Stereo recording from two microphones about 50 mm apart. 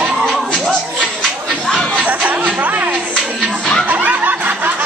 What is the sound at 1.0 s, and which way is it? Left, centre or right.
Chatter, centre.